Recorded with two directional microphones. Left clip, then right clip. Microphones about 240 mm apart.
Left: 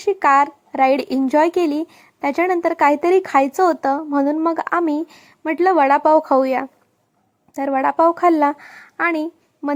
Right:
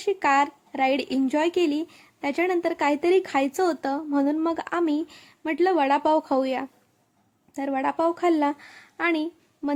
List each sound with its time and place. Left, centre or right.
0.0 s a woman's voice: centre